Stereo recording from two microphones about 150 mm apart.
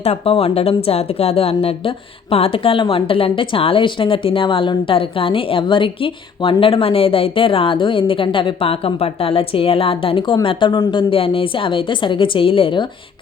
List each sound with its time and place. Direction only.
0.0 s a woman's voice: 40° left (ahead or behind)